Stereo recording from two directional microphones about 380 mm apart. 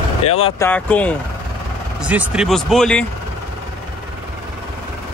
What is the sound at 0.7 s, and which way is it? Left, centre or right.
Speech, centre.